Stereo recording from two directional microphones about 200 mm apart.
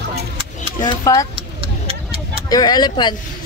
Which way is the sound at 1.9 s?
30° right (ahead or behind).